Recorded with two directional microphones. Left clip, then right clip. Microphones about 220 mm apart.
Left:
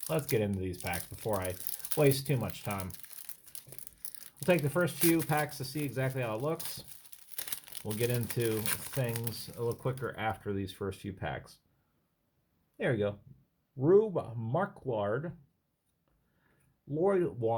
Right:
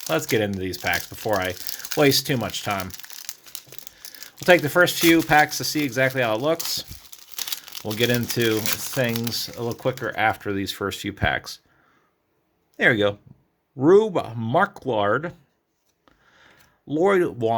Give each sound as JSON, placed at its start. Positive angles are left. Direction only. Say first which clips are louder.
{"t": 0.1, "sound": "speech", "louder": "right 10 dB", "side_deg": -40}
{"t": 4.4, "sound": "speech", "louder": "right 13 dB", "side_deg": -40}
{"t": 7.3, "sound": "crumpling", "louder": "right 13 dB", "side_deg": -5}
{"t": 7.9, "sound": "speech", "louder": "right 12 dB", "side_deg": -45}
{"t": 12.7, "sound": "speech", "louder": "right 13 dB", "side_deg": -40}
{"t": 17.0, "sound": "speech", "louder": "right 10 dB", "side_deg": -45}